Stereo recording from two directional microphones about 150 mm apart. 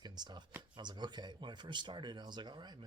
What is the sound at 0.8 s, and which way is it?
Speech, 30° right (ahead or behind).